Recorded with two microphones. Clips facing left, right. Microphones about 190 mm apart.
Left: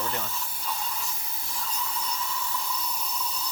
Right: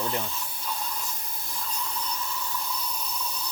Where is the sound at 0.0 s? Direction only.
10° right (ahead or behind).